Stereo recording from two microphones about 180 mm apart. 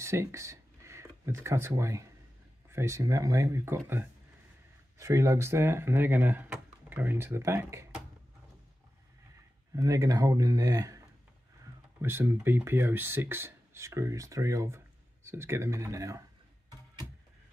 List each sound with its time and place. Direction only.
0.0 s speech: 15° right (ahead or behind)
9.8 s speech: 20° right (ahead or behind)
12.0 s speech: 15° right (ahead or behind)